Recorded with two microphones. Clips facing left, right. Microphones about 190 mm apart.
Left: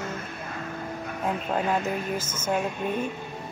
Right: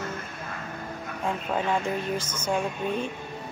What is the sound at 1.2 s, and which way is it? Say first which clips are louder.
Speech: left 1 dB; 5° left (ahead or behind).